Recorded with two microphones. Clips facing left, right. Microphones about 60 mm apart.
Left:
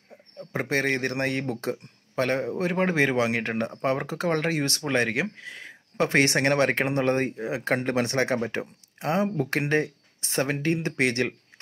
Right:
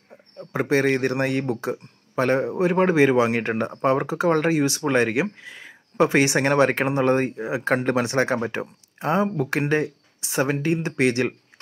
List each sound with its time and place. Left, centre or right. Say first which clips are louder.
0.4 s speech: right 5 dB; right
3.3 s speech: right 3 dB; right